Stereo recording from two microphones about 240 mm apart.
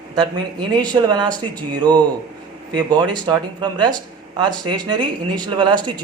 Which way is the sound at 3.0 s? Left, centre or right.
Centre.